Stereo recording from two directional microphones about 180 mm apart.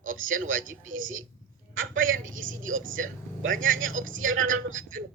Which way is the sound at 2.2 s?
45° right (ahead or behind).